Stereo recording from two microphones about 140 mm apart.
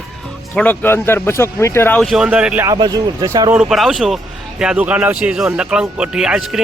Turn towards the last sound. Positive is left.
turn(degrees=-5)  # may be behind; listen again after turning